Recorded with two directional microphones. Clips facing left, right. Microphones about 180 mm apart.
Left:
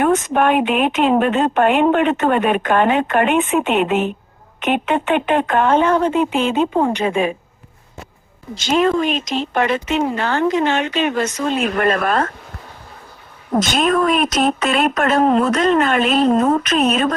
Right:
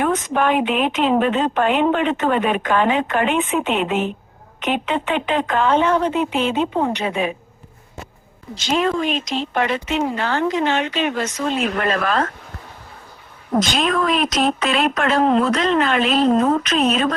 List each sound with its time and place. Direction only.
0.0 s speech: 55° left (ahead or behind)
8.5 s speech: 50° left (ahead or behind)
13.6 s speech: 45° left (ahead or behind)